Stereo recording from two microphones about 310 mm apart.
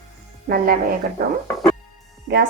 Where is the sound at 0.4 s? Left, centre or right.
Right.